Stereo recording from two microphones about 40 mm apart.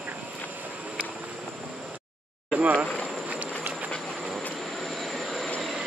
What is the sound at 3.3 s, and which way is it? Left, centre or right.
Train, right.